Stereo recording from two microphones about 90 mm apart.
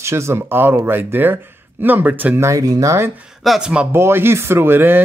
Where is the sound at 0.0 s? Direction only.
30° right (ahead or behind).